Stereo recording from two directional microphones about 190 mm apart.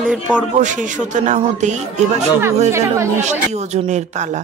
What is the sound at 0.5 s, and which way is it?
Speech, 40° right (ahead or behind).